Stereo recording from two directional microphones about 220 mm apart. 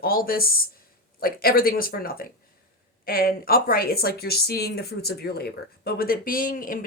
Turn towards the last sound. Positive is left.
turn(degrees=40)  # may be behind; listen again after turning